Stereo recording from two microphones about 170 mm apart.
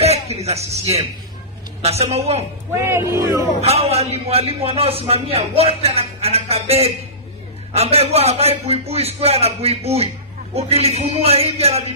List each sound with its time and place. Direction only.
0.0 s a man's voice: 40° right (ahead or behind)
2.7 s speech: 15° right (ahead or behind)
3.6 s a man's voice: 40° right (ahead or behind)